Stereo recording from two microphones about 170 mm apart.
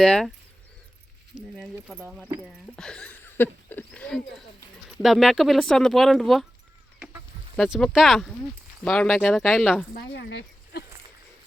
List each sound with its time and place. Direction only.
0.0 s speech: 5° left (ahead or behind)
1.5 s speech: centre (ahead or behind)
2.4 s speech: 5° left (ahead or behind)
7.5 s speech: centre (ahead or behind)
9.9 s speech: 85° left